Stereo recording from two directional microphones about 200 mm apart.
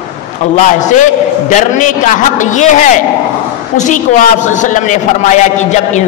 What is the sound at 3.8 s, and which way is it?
A man's voice, 40° left (ahead or behind).